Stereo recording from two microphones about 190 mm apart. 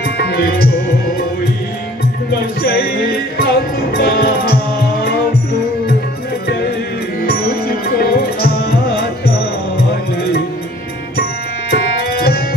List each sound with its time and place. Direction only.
0.2 s music: 55° left (ahead or behind)
2.6 s music: 55° left (ahead or behind)
7.2 s music: 50° left (ahead or behind)
9.8 s music: 55° left (ahead or behind)
11.7 s tabla: 55° left (ahead or behind)